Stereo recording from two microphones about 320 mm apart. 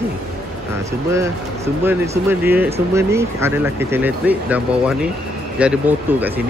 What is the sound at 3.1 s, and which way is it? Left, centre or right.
Speech, centre.